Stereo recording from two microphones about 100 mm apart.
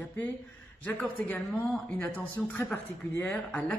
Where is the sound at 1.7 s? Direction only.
10° left (ahead or behind).